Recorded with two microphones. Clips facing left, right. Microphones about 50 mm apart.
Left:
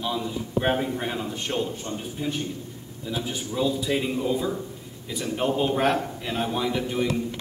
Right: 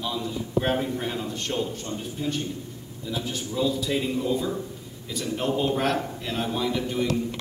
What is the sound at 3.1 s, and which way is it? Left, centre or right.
A man's voice, centre.